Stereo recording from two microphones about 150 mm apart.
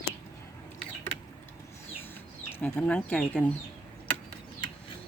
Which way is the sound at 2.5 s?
15° left (ahead or behind).